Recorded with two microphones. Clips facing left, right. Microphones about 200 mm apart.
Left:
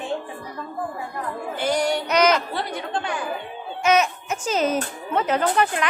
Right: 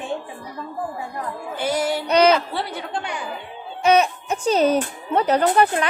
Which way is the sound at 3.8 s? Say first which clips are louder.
Right 3 dB; 35° right (ahead or behind).